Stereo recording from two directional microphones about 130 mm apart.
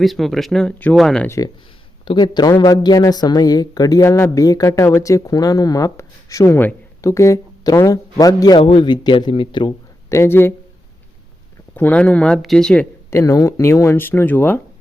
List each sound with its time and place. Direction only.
0.0 s speech: centre (ahead or behind)
2.0 s a man's voice: 35° left (ahead or behind)
10.1 s speech: 20° left (ahead or behind)
11.7 s speech: 15° left (ahead or behind)
13.1 s speech: 25° left (ahead or behind)